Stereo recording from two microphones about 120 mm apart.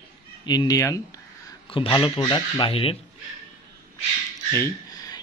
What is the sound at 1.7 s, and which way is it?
Speech, 45° left (ahead or behind).